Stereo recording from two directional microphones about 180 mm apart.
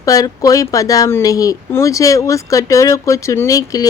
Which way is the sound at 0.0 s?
20° left (ahead or behind).